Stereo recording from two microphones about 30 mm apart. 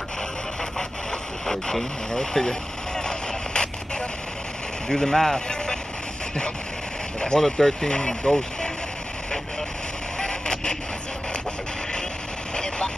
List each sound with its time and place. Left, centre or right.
1.5 s speech: centre
3.0 s a sound: left
4.8 s speech: left
7.3 s speech: centre
10.1 s a sound: left
12.5 s vehicle: left